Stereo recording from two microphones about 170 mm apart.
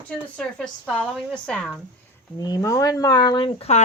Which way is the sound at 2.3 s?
20° left (ahead or behind).